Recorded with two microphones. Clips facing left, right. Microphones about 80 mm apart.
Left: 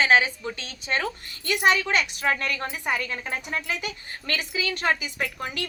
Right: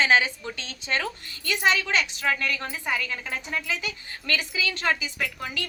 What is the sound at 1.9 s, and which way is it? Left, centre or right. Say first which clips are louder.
Speech: left 1 dB; left.